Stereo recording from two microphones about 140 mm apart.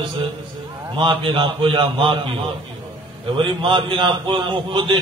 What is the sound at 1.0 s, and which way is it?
A man's voice, 35° right (ahead or behind).